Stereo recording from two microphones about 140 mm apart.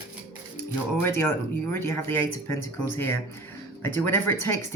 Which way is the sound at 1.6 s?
15° left (ahead or behind).